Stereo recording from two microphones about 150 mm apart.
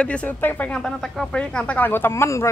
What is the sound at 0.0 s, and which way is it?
Speech, 10° left (ahead or behind).